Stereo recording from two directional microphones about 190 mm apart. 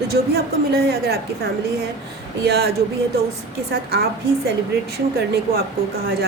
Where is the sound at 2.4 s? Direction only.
60° right (ahead or behind).